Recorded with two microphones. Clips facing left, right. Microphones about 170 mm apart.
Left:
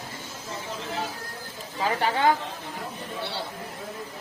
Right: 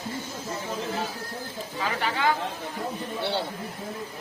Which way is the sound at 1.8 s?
35° left (ahead or behind).